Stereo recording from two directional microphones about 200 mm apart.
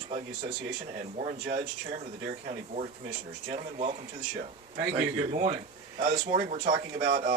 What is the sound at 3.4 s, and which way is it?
Speech, 30° right (ahead or behind).